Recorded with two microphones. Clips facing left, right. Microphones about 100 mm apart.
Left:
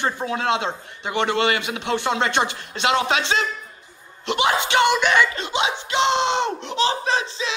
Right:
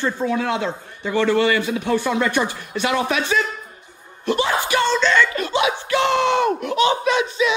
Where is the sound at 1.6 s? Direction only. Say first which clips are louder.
Right 3 dB; 80° left.